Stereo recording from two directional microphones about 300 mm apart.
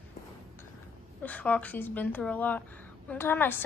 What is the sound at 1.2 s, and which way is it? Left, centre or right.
Speech, centre.